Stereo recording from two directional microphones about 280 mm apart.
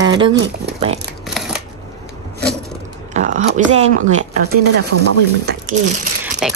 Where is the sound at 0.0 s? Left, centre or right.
Centre.